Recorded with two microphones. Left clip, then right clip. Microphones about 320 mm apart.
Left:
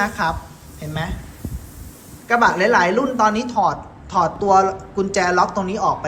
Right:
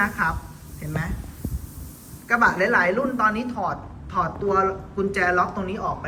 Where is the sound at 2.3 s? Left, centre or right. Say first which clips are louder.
Left 4 dB; centre.